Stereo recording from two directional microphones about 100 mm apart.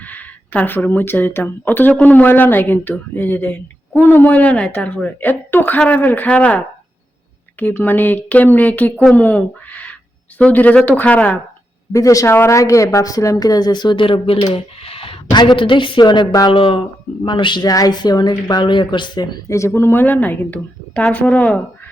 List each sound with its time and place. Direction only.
0.0 s speech: 15° left (ahead or behind)
7.6 s speech: 20° left (ahead or behind)
11.9 s speech: 35° left (ahead or behind)
16.5 s speech: 65° left (ahead or behind)
17.2 s speech: 50° left (ahead or behind)
19.5 s speech: 30° left (ahead or behind); by 21.6 s 15° left (ahead or behind)